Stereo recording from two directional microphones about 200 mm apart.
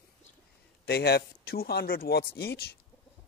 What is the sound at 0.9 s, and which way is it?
Speech, 55° left (ahead or behind).